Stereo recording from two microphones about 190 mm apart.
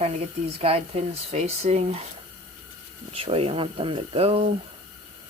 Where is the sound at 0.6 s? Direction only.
30° right (ahead or behind).